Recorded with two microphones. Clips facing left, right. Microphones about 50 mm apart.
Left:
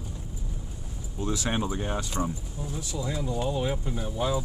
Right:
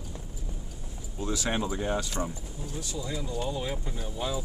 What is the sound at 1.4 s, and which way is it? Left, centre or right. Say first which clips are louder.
Speech: right 2 dB; centre.